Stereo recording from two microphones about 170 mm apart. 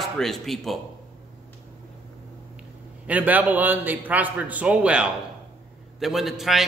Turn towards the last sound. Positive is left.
turn(degrees=0)  # may be behind; listen again after turning